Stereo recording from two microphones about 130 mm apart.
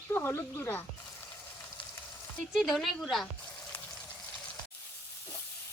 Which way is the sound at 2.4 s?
Centre (ahead or behind).